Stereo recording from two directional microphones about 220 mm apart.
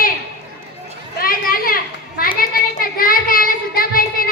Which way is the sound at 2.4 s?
40° left (ahead or behind).